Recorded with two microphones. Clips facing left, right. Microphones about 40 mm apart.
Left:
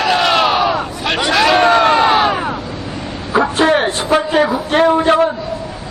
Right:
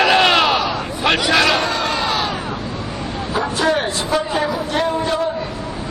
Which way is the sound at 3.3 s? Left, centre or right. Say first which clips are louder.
Left 6 dB; left.